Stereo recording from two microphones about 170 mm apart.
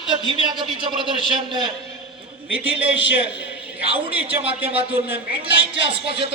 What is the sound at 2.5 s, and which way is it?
Speech, 10° right (ahead or behind).